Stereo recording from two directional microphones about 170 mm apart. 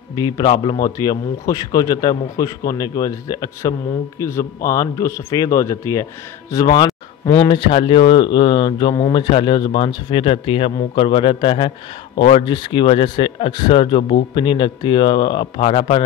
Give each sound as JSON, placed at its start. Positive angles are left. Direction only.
{"t": 0.1, "sound": "speech", "side_deg": 25}